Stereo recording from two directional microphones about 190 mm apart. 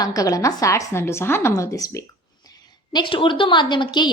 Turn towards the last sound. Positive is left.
turn(degrees=25)  # may be behind; listen again after turning